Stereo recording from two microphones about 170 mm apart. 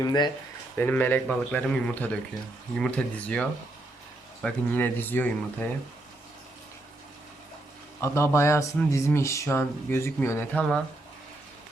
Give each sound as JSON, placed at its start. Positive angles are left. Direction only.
{"t": 0.0, "sound": "speech", "side_deg": 25}
{"t": 0.8, "sound": "speech", "side_deg": 10}
{"t": 8.0, "sound": "speech", "side_deg": 15}